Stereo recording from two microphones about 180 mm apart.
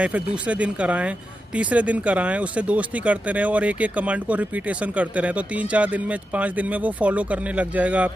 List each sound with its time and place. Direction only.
0.0 s speech: 5° right (ahead or behind)